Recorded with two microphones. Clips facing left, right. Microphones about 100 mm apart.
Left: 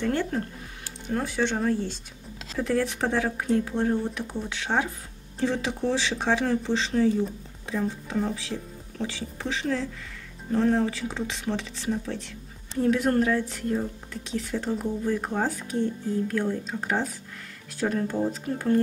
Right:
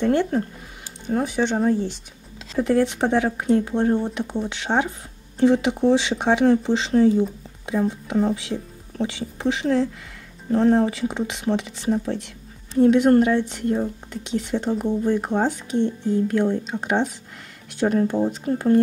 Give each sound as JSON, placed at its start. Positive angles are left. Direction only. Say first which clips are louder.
{"t": 0.0, "sound": "speech", "louder": "right 6 dB", "side_deg": -20}
{"t": 6.9, "sound": "speech", "louder": "right 7 dB", "side_deg": -30}
{"t": 7.9, "sound": "speech", "louder": "right 7 dB", "side_deg": -15}